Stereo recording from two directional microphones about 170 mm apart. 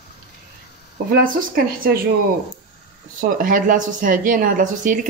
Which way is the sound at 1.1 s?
60° right (ahead or behind).